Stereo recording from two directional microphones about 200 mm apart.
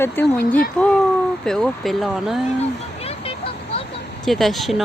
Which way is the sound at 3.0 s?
30° left (ahead or behind).